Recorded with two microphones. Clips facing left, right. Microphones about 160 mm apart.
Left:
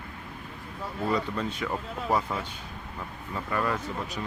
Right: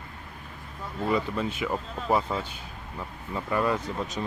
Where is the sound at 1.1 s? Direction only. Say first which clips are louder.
Right 2 dB; 5° right (ahead or behind).